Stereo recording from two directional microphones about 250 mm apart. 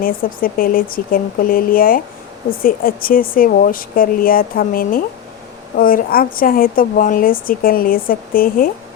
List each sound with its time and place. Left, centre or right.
0.0 s speech: left